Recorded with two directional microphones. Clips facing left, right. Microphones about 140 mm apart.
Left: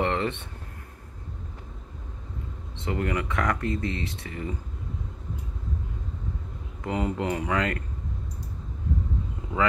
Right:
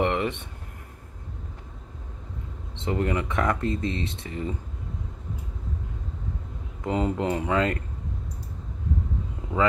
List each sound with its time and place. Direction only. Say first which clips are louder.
0.0 s a sound: right 1 dB; 15° right (ahead or behind)
2.7 s speech: right 2 dB; 25° right (ahead or behind)
6.8 s speech: right 2 dB; 25° right (ahead or behind)